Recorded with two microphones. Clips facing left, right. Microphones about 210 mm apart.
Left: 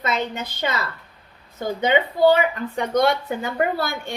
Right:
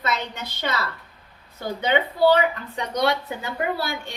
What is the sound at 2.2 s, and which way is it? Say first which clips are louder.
A woman's voice: left 1 dB; 45° left (ahead or behind).